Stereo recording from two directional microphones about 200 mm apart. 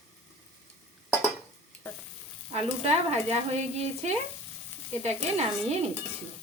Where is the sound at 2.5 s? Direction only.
35° right (ahead or behind).